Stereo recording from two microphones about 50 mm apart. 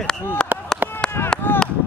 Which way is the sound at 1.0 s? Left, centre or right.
Centre.